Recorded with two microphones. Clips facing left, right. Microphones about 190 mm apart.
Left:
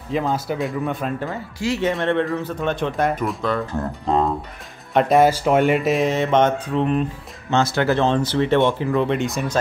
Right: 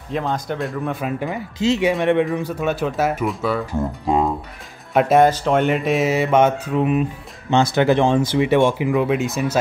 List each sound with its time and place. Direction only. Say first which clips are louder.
0.1 s speech: left 1 dB; 5° left (ahead or behind)
1.2 s speech: right 4 dB; 20° right (ahead or behind); by 9.6 s 5° right (ahead or behind)